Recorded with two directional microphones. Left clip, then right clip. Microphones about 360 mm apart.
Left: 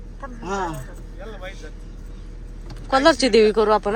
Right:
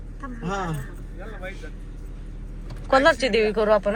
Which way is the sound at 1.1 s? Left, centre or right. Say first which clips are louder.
Left 1 dB; left.